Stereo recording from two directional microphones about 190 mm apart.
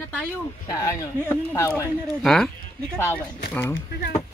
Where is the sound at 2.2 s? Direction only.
Centre (ahead or behind).